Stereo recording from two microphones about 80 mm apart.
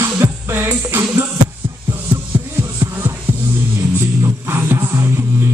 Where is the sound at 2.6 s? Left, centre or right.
Right.